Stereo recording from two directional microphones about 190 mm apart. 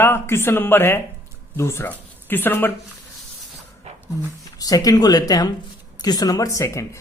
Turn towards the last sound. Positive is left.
turn(degrees=15)  # may be behind; listen again after turning